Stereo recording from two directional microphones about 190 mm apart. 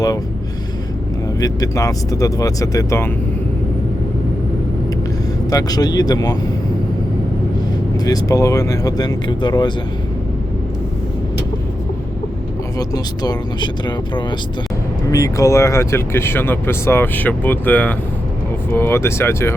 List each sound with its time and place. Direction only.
1.4 s speech: 15° left (ahead or behind)
5.5 s speech: 20° left (ahead or behind)
7.9 s speech: 20° left (ahead or behind)
12.9 s speech: 20° left (ahead or behind)